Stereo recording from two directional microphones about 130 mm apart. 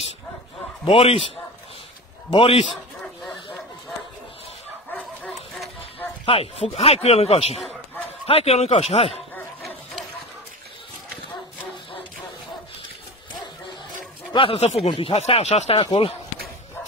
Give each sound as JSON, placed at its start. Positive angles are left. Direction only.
{"t": 0.9, "sound": "speech", "side_deg": 45}
{"t": 2.3, "sound": "speech", "side_deg": 45}
{"t": 6.2, "sound": "speech", "side_deg": 50}
{"t": 14.3, "sound": "speech", "side_deg": 45}